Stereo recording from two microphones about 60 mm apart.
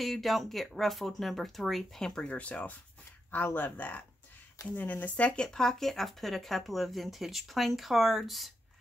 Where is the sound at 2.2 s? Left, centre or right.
Left; by 8.5 s centre.